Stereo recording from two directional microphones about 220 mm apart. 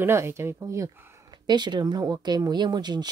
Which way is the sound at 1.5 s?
20° right (ahead or behind).